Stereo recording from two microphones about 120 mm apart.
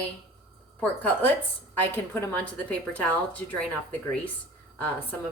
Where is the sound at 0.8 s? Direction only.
15° left (ahead or behind).